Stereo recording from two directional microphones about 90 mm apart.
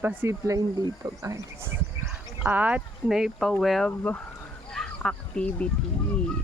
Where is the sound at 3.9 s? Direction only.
15° left (ahead or behind).